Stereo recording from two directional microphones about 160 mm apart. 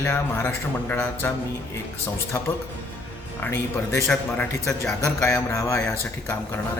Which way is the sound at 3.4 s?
15° left (ahead or behind).